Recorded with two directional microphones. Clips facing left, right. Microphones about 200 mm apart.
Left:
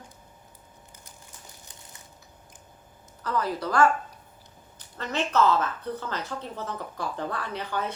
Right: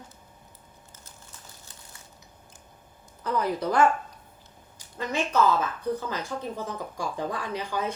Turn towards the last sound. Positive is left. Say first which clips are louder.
# right 1 dB
turn(degrees=-10)  # may be behind; listen again after turning